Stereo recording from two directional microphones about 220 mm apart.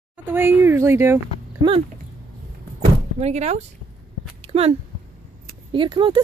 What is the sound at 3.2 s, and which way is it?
Speech, 30° right (ahead or behind).